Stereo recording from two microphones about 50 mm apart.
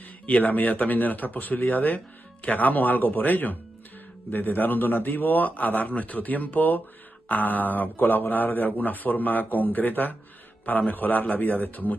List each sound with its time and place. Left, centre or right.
0.3 s a man's voice: left